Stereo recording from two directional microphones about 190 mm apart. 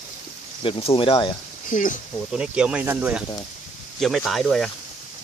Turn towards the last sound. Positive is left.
turn(degrees=0)  # may be behind; listen again after turning